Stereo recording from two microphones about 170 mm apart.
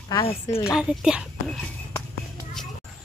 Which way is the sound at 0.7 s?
5° right (ahead or behind).